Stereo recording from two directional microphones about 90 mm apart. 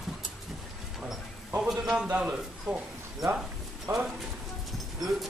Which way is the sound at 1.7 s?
Centre (ahead or behind).